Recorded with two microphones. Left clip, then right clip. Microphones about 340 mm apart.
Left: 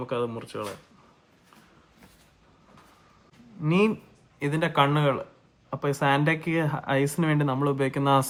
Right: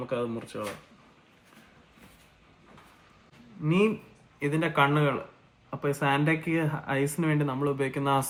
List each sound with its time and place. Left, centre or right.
0.1 s speech: left
3.6 s speech: left